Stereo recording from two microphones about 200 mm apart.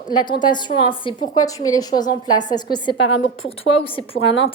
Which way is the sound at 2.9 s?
65° left (ahead or behind).